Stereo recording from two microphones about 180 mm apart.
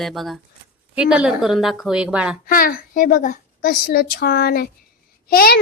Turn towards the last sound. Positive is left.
turn(degrees=55)  # may be behind; listen again after turning